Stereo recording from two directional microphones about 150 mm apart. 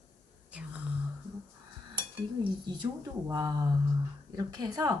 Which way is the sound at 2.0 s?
35° right (ahead or behind).